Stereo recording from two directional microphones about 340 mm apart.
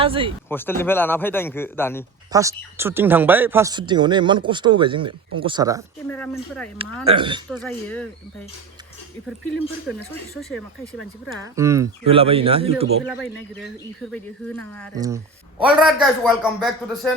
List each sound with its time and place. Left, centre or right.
0.0 s speech: centre
0.4 s a man's voice: centre
2.3 s speech: centre
6.1 s a man's voice: centre
6.7 s speech: centre
7.5 s a man's voice: centre
11.4 s speech: centre
13.1 s a man's voice: centre
14.9 s a man's voice: centre